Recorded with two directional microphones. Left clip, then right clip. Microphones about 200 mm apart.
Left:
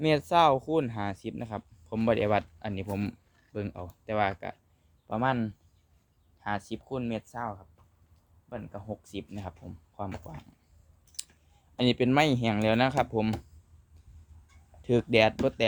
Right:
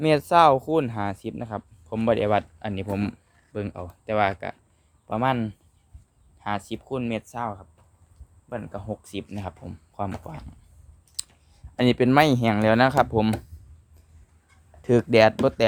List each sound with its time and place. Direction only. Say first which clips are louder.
0.0 s speech: right 6 dB; 15° right (ahead or behind)
11.8 s speech: right 6 dB; 15° right (ahead or behind)
14.8 s speech: right 6 dB; 15° right (ahead or behind)